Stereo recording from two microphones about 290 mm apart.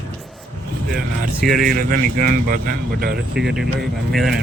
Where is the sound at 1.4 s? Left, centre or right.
Centre.